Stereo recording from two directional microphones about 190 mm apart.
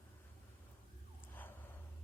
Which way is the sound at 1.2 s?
10° left (ahead or behind).